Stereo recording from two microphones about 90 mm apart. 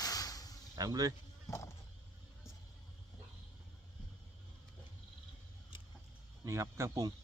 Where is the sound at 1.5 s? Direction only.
35° left (ahead or behind).